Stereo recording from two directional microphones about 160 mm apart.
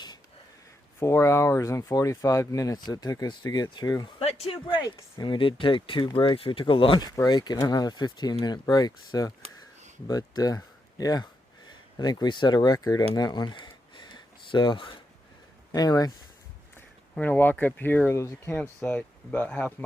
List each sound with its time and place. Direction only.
0.9 s speech: 15° left (ahead or behind)
4.2 s speech: 40° left (ahead or behind); by 13.1 s 20° left (ahead or behind)
13.1 s a sound: 25° left (ahead or behind)
15.7 s speech: 25° left (ahead or behind)
16.7 s speech: 10° left (ahead or behind)